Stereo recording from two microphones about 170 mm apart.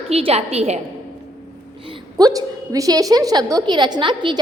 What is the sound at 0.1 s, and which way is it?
Speech, 35° right (ahead or behind).